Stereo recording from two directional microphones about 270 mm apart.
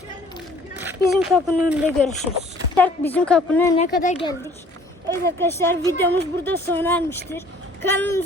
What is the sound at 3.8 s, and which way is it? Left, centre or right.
Speech, left.